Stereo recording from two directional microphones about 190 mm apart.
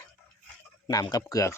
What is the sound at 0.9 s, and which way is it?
Speech, 20° left (ahead or behind).